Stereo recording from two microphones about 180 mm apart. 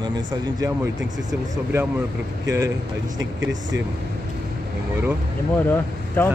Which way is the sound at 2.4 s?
20° right (ahead or behind).